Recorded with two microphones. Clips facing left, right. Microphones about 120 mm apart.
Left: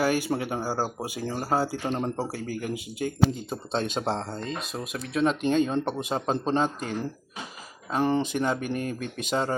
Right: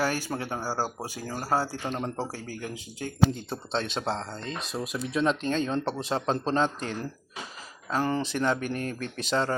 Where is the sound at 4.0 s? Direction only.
20° left (ahead or behind).